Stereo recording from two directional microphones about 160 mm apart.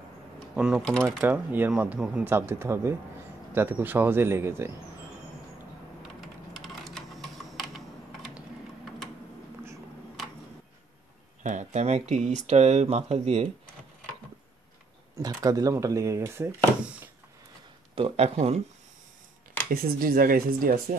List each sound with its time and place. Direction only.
0.6 s speech: 5° right (ahead or behind)
1.2 s speech: 10° right (ahead or behind)
6.2 s typing: centre (ahead or behind)
11.4 s speech: 50° right (ahead or behind)
15.2 s speech: 20° right (ahead or behind)
17.9 s speech: 35° right (ahead or behind)
19.7 s speech: 65° right (ahead or behind)